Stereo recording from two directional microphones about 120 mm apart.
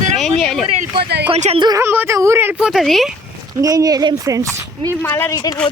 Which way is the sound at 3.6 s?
30° right (ahead or behind).